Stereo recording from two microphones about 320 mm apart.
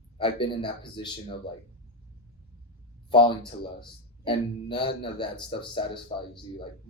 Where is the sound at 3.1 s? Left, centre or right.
Centre.